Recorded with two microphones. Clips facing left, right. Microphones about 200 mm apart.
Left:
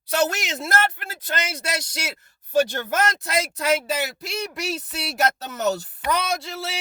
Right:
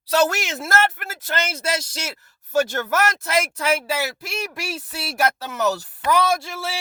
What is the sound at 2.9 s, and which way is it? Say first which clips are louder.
Speech: right 2 dB; 20° left (ahead or behind).